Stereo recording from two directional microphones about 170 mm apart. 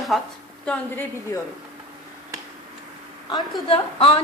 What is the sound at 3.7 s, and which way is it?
Speech, 35° left (ahead or behind).